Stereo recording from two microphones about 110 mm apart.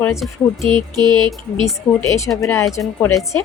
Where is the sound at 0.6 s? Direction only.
45° right (ahead or behind).